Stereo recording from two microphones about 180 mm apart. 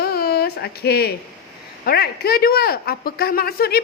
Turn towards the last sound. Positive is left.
turn(degrees=60)  # may be behind; listen again after turning